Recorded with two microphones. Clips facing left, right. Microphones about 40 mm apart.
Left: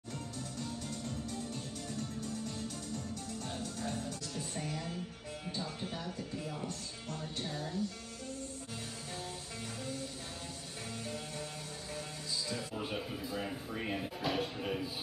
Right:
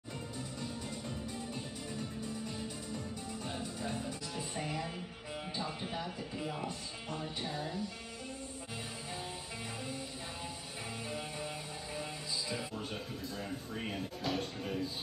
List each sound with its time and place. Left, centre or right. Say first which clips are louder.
0.6 s music: left 2 dB; centre
5.5 s speech: even; centre
11.1 s music: right 3 dB; centre